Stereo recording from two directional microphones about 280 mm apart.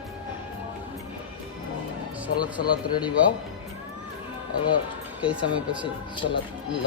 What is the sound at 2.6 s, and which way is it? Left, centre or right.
Speech, centre.